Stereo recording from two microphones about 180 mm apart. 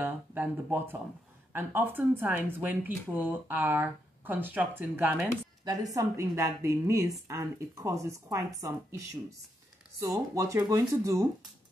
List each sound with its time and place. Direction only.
0.0 s speech: 10° right (ahead or behind)